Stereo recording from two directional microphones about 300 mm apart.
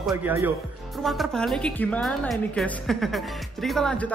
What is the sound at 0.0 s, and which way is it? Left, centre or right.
A woman's voice, centre.